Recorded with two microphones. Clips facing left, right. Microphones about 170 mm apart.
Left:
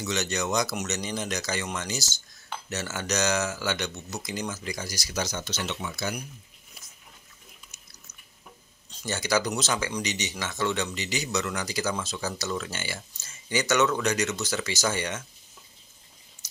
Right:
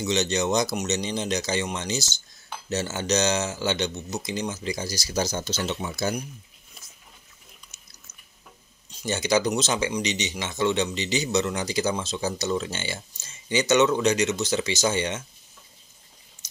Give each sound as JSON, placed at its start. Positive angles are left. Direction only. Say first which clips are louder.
{"t": 0.0, "sound": "speech", "louder": "right 5 dB", "side_deg": -25}
{"t": 8.9, "sound": "speech", "louder": "right 3 dB", "side_deg": -20}